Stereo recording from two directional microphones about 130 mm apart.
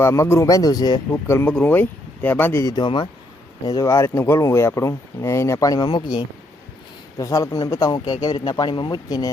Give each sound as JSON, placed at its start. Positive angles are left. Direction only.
{"t": 0.0, "sound": "speech", "side_deg": 20}
{"t": 1.1, "sound": "speech", "side_deg": 20}
{"t": 2.7, "sound": "speech", "side_deg": 35}
{"t": 3.7, "sound": "speech", "side_deg": 25}